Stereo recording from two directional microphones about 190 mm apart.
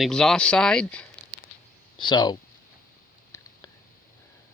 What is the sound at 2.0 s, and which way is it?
Speech, 25° left (ahead or behind).